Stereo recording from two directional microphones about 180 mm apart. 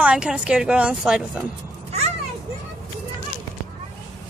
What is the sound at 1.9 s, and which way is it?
Children playing, 35° right (ahead or behind).